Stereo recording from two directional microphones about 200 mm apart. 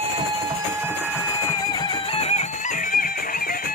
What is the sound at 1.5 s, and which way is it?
Music, 20° left (ahead or behind).